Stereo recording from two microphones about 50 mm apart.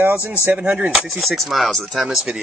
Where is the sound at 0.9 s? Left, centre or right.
Centre.